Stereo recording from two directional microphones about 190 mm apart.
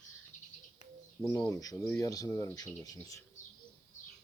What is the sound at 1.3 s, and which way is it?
Speech, 20° left (ahead or behind).